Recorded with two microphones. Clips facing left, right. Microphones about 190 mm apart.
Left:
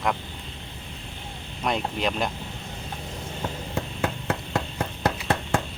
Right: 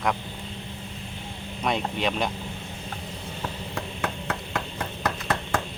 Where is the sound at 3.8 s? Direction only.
25° left (ahead or behind).